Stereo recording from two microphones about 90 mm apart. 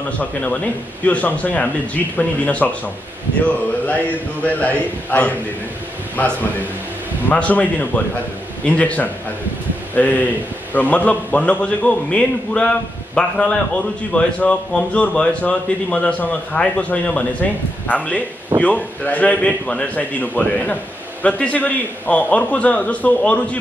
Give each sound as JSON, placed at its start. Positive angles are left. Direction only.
{"t": 0.2, "sound": "speech", "side_deg": 15}
{"t": 7.2, "sound": "speech", "side_deg": 15}